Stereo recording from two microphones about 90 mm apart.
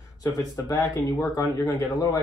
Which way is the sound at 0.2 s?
40° left (ahead or behind).